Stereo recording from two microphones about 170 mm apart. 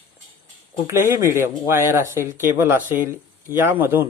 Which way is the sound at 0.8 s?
15° right (ahead or behind).